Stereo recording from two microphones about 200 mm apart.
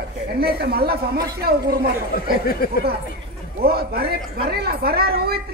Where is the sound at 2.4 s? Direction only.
50° left (ahead or behind).